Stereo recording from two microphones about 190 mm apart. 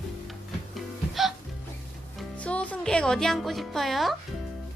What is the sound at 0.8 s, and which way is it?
Music, centre (ahead or behind).